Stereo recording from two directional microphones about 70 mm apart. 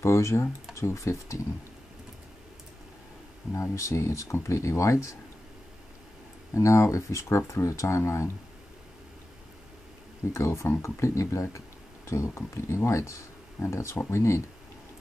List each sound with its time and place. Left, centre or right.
0.0 s speech: left
3.5 s speech: left
6.5 s speech: left
10.3 s speech: left